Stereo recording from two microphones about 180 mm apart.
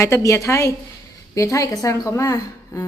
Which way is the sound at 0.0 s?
15° left (ahead or behind).